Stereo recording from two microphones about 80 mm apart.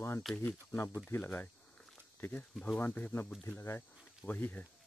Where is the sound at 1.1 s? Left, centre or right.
Left.